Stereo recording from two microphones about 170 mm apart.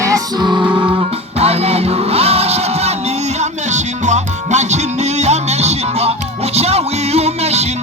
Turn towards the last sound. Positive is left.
turn(degrees=-40)  # may be behind; listen again after turning